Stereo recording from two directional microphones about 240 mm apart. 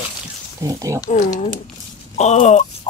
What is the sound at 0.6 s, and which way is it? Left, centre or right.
Speech, centre.